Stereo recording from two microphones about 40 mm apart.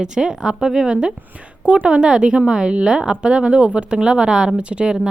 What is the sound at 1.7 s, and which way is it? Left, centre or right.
A woman's voice, right.